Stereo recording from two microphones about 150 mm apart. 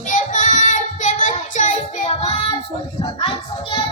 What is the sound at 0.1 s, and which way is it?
Child singing, 55° left (ahead or behind).